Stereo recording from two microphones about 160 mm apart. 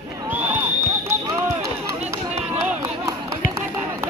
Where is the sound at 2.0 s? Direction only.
40° right (ahead or behind).